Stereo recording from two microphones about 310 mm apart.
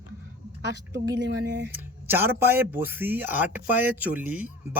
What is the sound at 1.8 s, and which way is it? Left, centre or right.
Speech, centre.